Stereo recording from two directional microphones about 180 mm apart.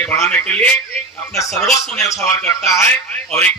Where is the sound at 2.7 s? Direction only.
15° left (ahead or behind).